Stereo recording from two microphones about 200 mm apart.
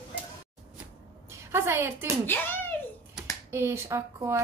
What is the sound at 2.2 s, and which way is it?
Speech, 10° left (ahead or behind).